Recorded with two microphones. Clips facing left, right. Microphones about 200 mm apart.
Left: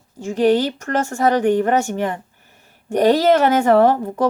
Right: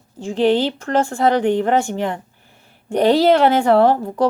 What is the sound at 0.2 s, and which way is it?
Speech, 45° left (ahead or behind).